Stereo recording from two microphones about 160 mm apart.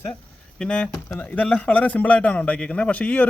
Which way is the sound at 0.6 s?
5° left (ahead or behind).